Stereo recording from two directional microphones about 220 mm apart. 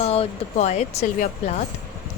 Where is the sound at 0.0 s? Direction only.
30° left (ahead or behind).